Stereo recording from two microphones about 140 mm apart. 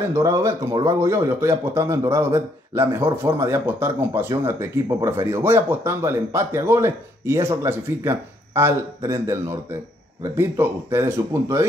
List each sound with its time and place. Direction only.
0.1 s a man's voice: 20° right (ahead or behind)